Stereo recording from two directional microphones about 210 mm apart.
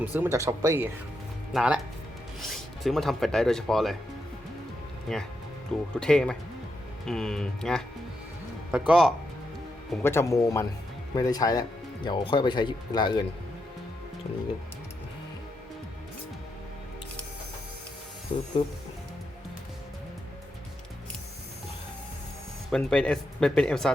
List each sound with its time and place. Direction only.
0.0 s speech: 10° right (ahead or behind)
5.1 s speech: centre (ahead or behind)
9.9 s speech: 10° left (ahead or behind)
18.3 s speech: 25° left (ahead or behind)
22.7 s speech: 5° left (ahead or behind)